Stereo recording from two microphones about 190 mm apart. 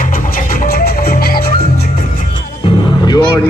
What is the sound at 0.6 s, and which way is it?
Music, 50° left (ahead or behind).